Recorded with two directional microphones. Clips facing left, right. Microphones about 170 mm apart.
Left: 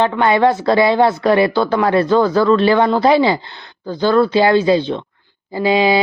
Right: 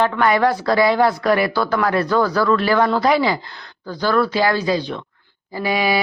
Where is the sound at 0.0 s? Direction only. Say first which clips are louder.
Left 3 dB; 25° left (ahead or behind).